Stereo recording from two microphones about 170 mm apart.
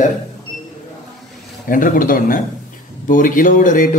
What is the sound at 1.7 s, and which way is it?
A man's voice, 50° left (ahead or behind).